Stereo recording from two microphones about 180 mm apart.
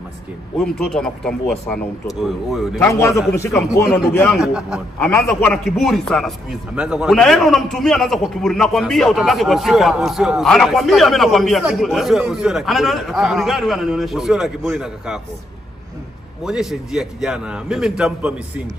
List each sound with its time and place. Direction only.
0.6 s speech: centre (ahead or behind)
2.8 s a man's voice: 15° left (ahead or behind)
4.4 s speech: 5° right (ahead or behind)
4.9 s a man's voice: 10° left (ahead or behind)
16.4 s speech: 5° right (ahead or behind)